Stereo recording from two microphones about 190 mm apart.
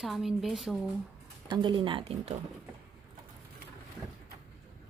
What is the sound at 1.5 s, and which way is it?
Speech, 25° right (ahead or behind).